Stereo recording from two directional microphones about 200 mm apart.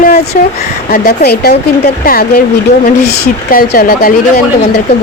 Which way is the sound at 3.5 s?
45° left (ahead or behind).